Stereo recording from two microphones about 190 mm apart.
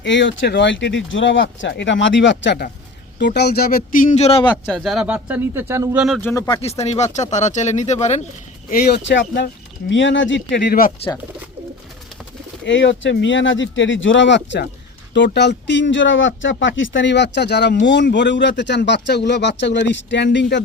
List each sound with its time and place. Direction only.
0.0 s speech: 70° left (ahead or behind); by 4.4 s 35° left (ahead or behind)
4.4 s speech: 5° left (ahead or behind)
6.2 s speech: 15° left (ahead or behind)
6.6 s speech: 35° left (ahead or behind)
8.7 s speech: 65° left (ahead or behind)
12.6 s speech: 70° left (ahead or behind)